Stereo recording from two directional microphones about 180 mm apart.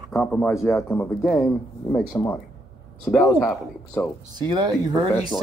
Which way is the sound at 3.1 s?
Centre (ahead or behind).